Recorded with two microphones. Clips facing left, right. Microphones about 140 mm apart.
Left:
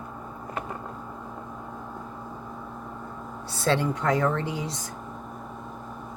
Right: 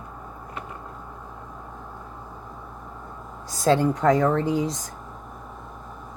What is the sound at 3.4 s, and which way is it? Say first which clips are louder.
Speech: right 5 dB; 40° right (ahead or behind).